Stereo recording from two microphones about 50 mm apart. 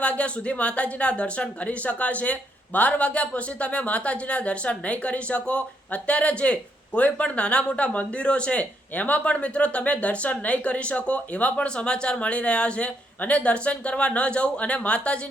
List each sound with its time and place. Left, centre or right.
0.0 s speech: left